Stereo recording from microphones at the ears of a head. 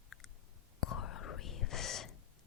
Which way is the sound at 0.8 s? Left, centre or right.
Left.